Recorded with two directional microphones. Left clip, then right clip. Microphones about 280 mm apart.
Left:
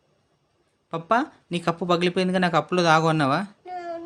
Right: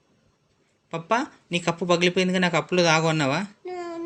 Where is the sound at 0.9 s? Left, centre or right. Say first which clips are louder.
Left 2 dB; centre.